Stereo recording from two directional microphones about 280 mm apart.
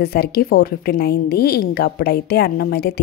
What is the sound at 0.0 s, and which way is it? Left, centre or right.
A woman's voice, left.